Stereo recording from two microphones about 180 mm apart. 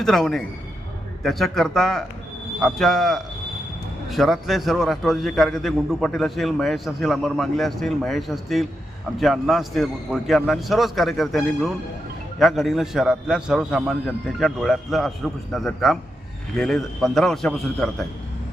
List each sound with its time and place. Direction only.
0.0 s a man's voice: centre (ahead or behind)